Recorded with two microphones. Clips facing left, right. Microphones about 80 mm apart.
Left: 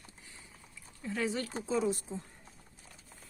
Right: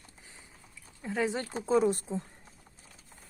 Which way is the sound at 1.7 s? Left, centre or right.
Right.